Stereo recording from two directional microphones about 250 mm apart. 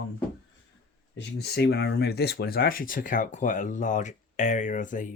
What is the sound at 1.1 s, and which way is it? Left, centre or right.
Speech, left.